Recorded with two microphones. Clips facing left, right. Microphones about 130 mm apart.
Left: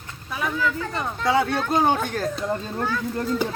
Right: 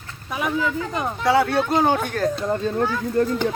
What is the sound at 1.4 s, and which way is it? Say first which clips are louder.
Speech: right 3 dB; 5° right (ahead or behind).